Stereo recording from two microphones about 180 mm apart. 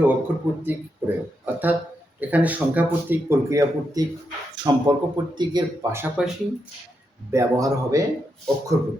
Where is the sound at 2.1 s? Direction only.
10° right (ahead or behind).